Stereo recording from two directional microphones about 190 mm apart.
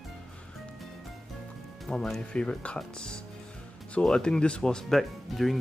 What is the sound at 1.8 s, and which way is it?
Speech, centre (ahead or behind).